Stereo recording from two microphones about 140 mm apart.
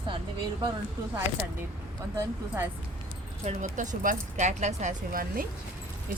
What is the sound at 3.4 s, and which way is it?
Speech, 60° right (ahead or behind).